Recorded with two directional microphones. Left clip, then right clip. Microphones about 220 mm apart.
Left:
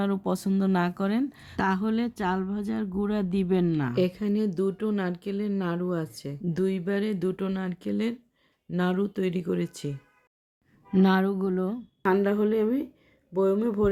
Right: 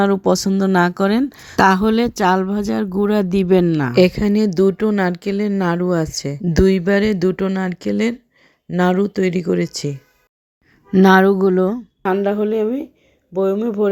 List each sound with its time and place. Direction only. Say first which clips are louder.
0.0 s a woman's voice: right 13 dB; 25° right (ahead or behind)
12.0 s a woman's voice: right 6 dB; 10° right (ahead or behind)